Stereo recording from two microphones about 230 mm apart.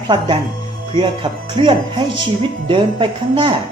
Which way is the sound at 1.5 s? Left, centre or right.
Right.